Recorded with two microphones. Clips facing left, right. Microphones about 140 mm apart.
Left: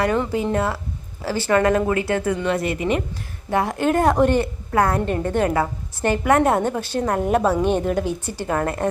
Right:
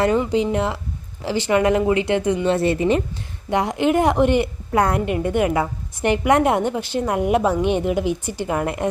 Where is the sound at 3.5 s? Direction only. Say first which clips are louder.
Right 1 dB; 15° right (ahead or behind).